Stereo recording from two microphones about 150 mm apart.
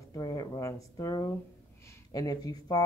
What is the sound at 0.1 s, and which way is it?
Speech, 25° left (ahead or behind).